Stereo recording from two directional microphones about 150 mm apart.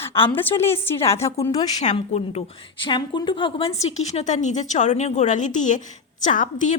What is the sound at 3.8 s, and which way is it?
A woman's voice, 45° left (ahead or behind).